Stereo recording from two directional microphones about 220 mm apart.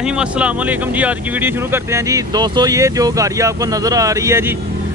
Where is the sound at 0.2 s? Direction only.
5° right (ahead or behind).